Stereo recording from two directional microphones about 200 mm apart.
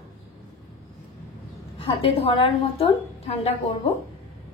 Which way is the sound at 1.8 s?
25° left (ahead or behind).